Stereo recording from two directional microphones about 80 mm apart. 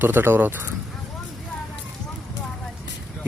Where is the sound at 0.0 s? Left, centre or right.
Right.